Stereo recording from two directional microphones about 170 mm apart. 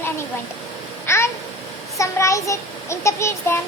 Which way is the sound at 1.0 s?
15° left (ahead or behind).